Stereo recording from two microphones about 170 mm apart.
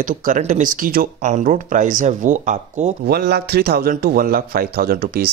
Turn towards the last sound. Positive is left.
turn(degrees=-65)  # may be behind; listen again after turning